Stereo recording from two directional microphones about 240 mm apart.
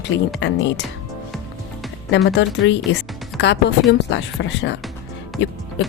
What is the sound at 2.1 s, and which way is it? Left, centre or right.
Speech, left.